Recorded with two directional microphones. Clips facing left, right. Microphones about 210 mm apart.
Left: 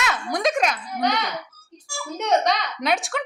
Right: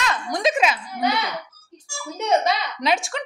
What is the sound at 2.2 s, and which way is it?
Speech, 5° right (ahead or behind).